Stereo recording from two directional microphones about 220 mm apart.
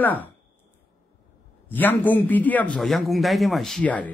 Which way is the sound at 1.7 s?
10° left (ahead or behind).